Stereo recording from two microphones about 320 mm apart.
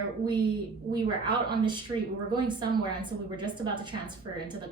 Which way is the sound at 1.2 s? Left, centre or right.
Centre.